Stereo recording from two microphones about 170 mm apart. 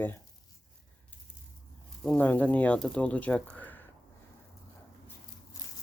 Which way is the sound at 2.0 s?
10° left (ahead or behind).